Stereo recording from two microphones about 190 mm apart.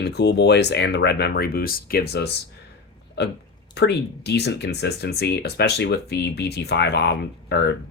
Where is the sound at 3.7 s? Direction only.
60° left (ahead or behind).